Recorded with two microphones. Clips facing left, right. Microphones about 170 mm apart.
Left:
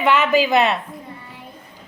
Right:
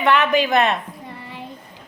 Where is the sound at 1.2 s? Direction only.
80° right.